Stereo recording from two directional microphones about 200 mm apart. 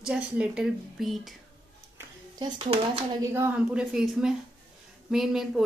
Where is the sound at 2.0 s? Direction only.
20° right (ahead or behind).